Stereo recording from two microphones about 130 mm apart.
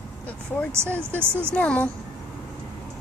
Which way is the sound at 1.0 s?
15° right (ahead or behind).